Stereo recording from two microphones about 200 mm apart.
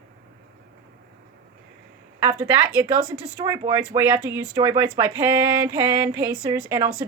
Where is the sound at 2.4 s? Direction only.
20° right (ahead or behind).